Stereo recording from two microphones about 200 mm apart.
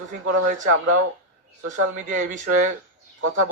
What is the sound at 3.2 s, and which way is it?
Speech, 90° right.